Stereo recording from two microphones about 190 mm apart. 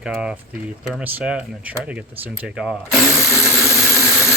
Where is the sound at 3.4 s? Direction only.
15° left (ahead or behind).